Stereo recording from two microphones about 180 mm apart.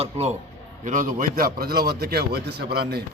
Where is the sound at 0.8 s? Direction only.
45° right (ahead or behind).